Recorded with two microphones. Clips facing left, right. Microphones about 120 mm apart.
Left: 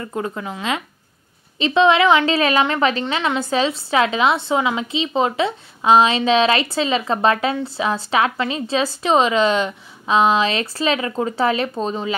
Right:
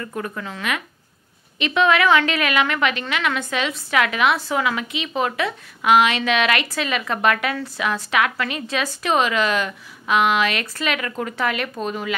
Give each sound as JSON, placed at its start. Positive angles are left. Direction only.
{"t": 0.0, "sound": "a woman's voice", "side_deg": 20}